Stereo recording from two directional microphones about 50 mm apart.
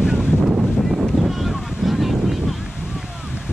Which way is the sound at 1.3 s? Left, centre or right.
Centre.